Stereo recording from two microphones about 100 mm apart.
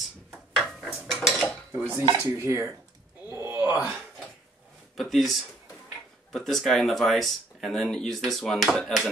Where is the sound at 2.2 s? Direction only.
30° right (ahead or behind).